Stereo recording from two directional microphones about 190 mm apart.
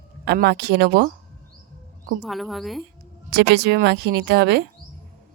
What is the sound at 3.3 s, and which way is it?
Speech, 60° right (ahead or behind).